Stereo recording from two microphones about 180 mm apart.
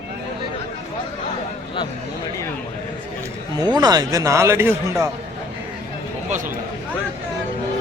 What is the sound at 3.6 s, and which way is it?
A man's voice, 20° right (ahead or behind).